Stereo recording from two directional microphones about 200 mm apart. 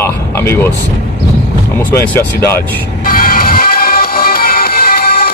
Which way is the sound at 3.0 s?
45° left (ahead or behind).